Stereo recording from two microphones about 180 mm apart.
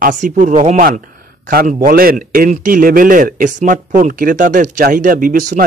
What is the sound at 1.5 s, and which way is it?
A man's voice, 55° right (ahead or behind).